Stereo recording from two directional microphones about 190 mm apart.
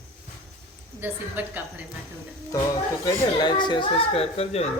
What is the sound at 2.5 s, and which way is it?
A man's voice, 15° left (ahead or behind).